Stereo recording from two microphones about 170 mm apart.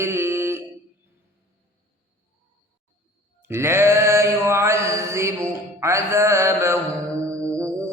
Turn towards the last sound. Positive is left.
turn(degrees=-15)  # may be behind; listen again after turning